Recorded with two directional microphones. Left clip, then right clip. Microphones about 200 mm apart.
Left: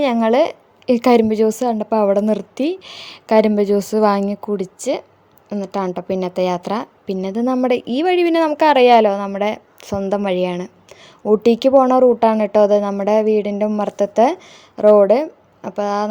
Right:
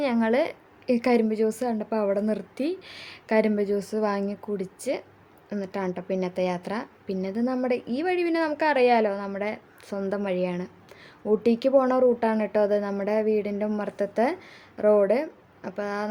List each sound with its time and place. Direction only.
0.0 s a woman's voice: 35° left (ahead or behind)